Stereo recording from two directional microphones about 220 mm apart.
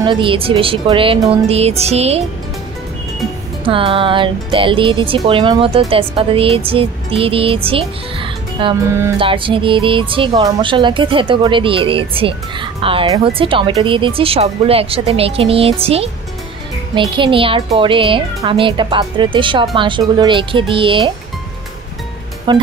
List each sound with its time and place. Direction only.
0.0 s speech: 20° right (ahead or behind)
3.6 s speech: 25° right (ahead or behind)
17.1 s speech: 25° right (ahead or behind)
22.5 s speech: 20° right (ahead or behind)